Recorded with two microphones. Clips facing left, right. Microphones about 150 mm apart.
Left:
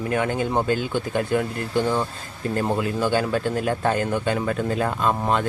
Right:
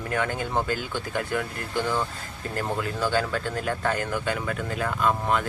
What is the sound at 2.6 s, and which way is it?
Speech, 20° left (ahead or behind).